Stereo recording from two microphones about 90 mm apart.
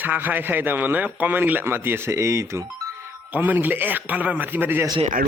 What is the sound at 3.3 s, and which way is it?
Speech, 20° right (ahead or behind).